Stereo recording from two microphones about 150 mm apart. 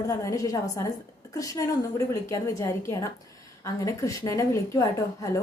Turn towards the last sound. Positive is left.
turn(degrees=20)  # may be behind; listen again after turning